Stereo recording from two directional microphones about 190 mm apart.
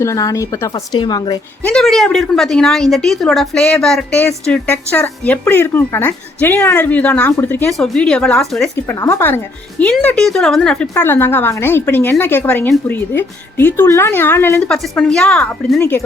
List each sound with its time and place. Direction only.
0.0 s a woman's voice: 15° left (ahead or behind)
1.6 s a woman's voice: 5° left (ahead or behind)
8.7 s a woman's voice: 15° left (ahead or behind)